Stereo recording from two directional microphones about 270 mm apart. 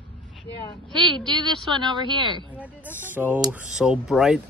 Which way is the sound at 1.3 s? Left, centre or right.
Centre.